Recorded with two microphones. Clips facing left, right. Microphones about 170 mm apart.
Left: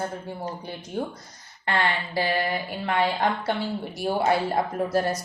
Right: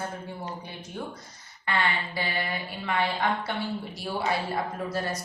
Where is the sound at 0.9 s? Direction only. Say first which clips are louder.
Left 7 dB; 40° left (ahead or behind).